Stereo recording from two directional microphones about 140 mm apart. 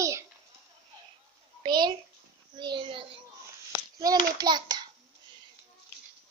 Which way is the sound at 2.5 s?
35° right (ahead or behind).